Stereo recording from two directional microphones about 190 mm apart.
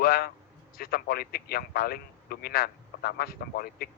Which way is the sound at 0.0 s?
50° left (ahead or behind).